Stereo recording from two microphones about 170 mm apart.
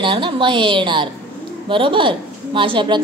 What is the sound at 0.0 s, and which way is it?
A woman's voice, 30° right (ahead or behind).